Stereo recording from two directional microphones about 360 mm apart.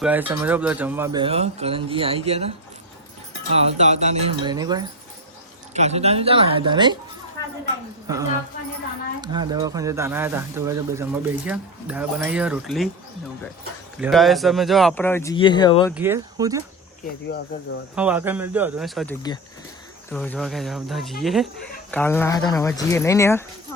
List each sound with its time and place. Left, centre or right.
0.0 s speech: centre
3.5 s speech: centre
8.0 s speech: centre
14.0 s speech: centre
16.0 s speech: centre
17.9 s speech: centre